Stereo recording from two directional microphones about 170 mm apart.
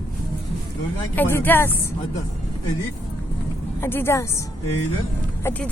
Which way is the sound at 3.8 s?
15° left (ahead or behind).